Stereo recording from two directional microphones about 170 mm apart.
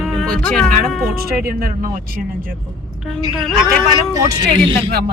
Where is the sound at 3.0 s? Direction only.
Centre (ahead or behind).